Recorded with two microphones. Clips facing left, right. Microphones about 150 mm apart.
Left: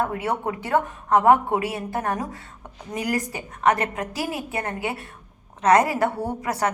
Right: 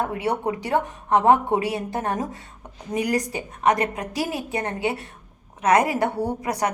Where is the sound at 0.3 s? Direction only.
15° right (ahead or behind).